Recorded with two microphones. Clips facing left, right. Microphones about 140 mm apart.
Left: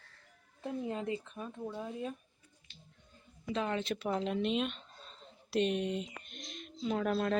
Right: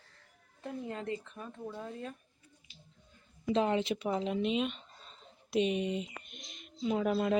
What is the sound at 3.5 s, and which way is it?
Speech, 25° right (ahead or behind).